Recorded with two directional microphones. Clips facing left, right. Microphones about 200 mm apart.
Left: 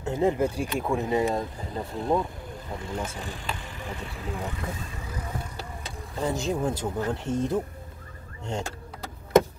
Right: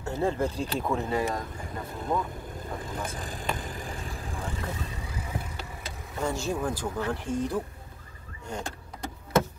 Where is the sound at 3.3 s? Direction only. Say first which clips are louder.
Right 2 dB; 45° right (ahead or behind).